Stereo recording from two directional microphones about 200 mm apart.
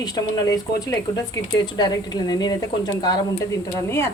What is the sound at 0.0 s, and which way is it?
A woman's voice, 20° left (ahead or behind).